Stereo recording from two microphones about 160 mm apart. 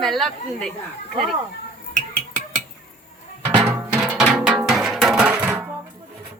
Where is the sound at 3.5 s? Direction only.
10° right (ahead or behind).